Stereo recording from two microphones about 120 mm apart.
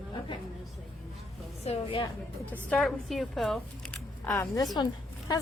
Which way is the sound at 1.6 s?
55° left (ahead or behind).